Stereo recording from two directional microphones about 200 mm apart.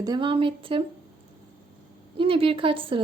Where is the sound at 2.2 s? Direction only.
25° right (ahead or behind).